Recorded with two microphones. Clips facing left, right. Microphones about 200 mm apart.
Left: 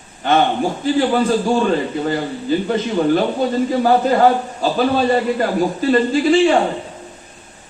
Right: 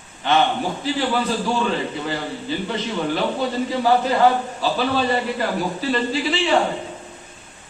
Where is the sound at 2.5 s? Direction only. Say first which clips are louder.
Left 8 dB; 50° left (ahead or behind).